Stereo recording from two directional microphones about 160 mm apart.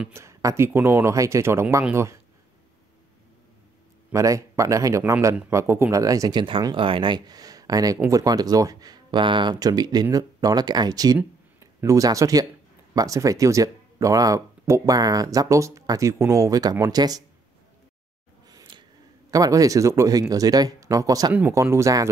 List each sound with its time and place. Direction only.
0.0 s speech: 15° right (ahead or behind)
4.1 s speech: 20° right (ahead or behind)
18.5 s a sound: 25° right (ahead or behind)
19.3 s speech: 20° right (ahead or behind)